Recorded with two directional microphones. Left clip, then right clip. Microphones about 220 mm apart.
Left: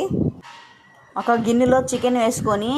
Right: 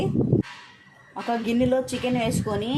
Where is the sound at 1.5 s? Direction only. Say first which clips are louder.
Left 3 dB; 20° left (ahead or behind).